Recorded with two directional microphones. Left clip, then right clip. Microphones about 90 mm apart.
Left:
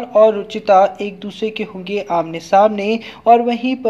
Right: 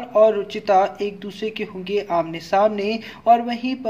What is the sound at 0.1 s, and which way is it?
A woman's voice, 5° left (ahead or behind).